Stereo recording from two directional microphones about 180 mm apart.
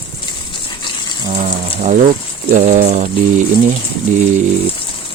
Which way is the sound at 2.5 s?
40° right (ahead or behind).